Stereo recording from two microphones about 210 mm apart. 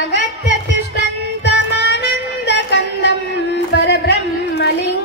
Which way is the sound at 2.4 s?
55° left (ahead or behind).